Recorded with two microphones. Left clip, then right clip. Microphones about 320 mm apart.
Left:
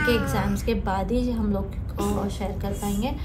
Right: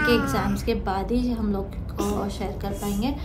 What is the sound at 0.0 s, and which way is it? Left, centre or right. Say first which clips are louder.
A woman's voice: right 2 dB; centre.